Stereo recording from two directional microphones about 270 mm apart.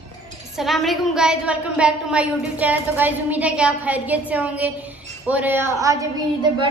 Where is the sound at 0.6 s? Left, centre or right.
Centre.